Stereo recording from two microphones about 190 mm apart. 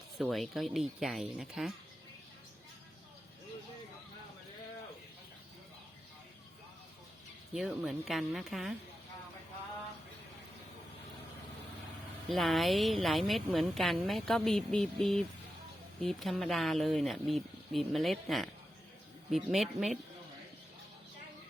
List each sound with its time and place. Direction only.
0.2 s a woman's voice: centre (ahead or behind)
7.5 s a woman's voice: 5° right (ahead or behind)
12.3 s a woman's voice: centre (ahead or behind)